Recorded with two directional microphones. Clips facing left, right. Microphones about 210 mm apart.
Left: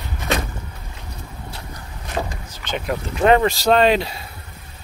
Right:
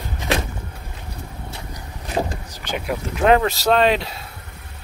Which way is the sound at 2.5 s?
10° right (ahead or behind).